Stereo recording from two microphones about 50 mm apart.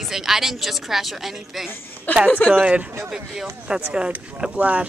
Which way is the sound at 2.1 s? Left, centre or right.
Left.